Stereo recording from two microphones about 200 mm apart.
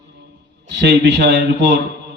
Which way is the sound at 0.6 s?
60° right (ahead or behind).